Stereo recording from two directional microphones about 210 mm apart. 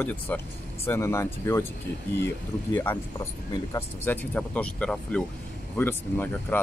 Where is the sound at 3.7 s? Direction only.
10° left (ahead or behind).